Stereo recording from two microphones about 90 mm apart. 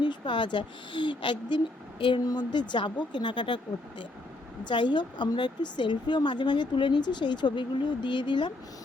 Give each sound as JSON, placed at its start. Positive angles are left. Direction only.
{"t": 0.0, "sound": "speech", "side_deg": 60}
{"t": 2.2, "sound": "speech", "side_deg": 50}